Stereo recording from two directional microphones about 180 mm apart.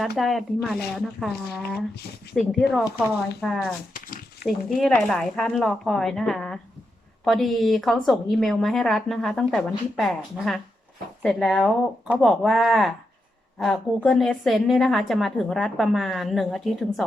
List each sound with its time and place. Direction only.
0.0 s a woman's voice: centre (ahead or behind)
2.3 s a woman's voice: centre (ahead or behind)
3.9 s speech: 50° left (ahead or behind)
4.4 s a woman's voice: centre (ahead or behind)